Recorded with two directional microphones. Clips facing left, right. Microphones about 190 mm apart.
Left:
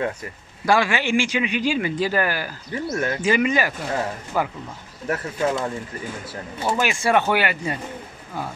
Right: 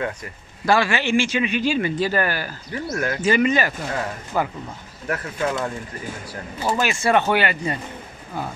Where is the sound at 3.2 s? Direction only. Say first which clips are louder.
Right 2 dB; 15° left (ahead or behind).